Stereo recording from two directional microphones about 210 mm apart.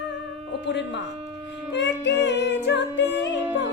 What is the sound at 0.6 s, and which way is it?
Music, 55° left (ahead or behind).